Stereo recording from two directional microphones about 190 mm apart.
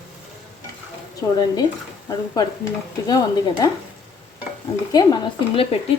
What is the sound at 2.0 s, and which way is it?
Speech, 20° left (ahead or behind).